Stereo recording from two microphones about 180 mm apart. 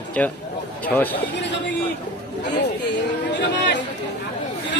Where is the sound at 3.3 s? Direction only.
70° left (ahead or behind).